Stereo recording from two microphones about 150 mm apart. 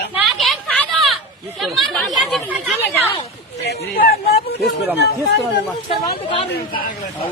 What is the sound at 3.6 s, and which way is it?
A man's voice, 90° left.